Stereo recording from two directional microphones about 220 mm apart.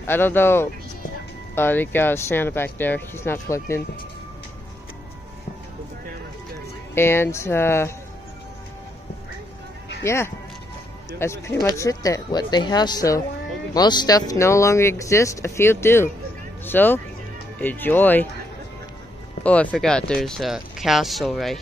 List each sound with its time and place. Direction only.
0.0 s speech: 10° left (ahead or behind)
7.0 s speech: 10° left (ahead or behind)
10.0 s speech: 10° left (ahead or behind)
19.4 s speech: 5° left (ahead or behind)